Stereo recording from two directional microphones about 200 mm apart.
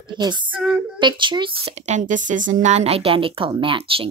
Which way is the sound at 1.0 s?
25° right (ahead or behind).